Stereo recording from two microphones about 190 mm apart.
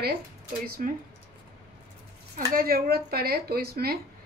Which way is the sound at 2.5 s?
50° right (ahead or behind).